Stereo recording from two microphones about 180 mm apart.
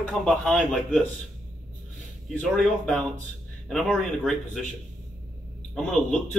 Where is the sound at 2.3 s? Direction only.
5° left (ahead or behind).